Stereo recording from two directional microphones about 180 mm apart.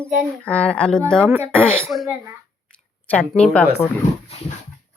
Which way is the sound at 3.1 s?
5° left (ahead or behind).